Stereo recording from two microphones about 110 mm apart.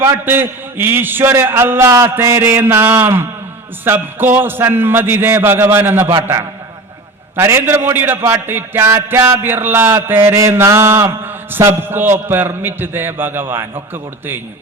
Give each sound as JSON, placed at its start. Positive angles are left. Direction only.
{"t": 0.0, "sound": "mantra", "side_deg": -20}